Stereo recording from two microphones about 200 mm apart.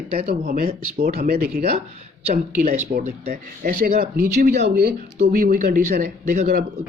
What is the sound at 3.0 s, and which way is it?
Speech, 40° right (ahead or behind).